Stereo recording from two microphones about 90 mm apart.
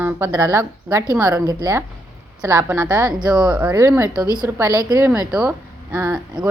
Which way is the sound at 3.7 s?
30° right (ahead or behind).